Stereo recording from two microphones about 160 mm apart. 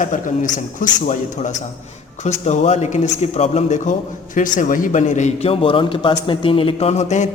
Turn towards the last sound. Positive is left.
turn(degrees=45)  # may be behind; listen again after turning